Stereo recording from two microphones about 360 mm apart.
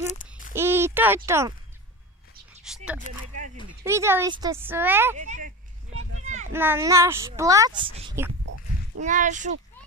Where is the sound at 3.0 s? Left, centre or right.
Right.